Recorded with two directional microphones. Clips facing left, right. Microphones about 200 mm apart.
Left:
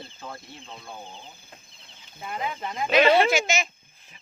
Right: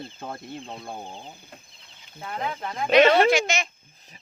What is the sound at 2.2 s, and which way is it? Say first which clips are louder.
Speech: right 1 dB; 5° left (ahead or behind).